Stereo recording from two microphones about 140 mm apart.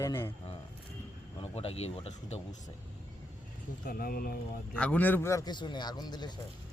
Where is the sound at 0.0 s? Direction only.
20° left (ahead or behind).